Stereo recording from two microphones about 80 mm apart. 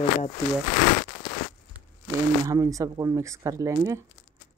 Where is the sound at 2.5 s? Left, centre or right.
Right.